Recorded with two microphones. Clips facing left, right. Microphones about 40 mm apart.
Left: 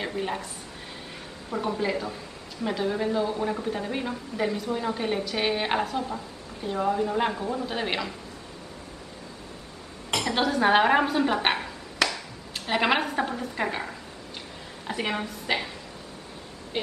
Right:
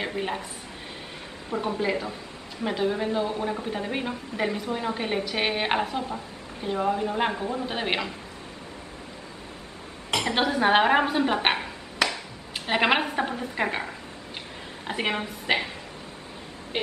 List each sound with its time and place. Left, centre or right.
0.0 s a woman's voice: centre
1.5 s a woman's voice: centre
10.2 s speech: centre
14.9 s a woman's voice: centre
16.7 s speech: right